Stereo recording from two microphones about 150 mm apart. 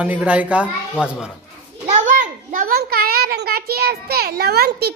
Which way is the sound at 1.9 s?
55° right (ahead or behind).